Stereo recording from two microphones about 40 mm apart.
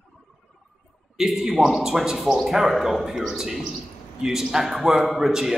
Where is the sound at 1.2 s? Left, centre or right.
Centre.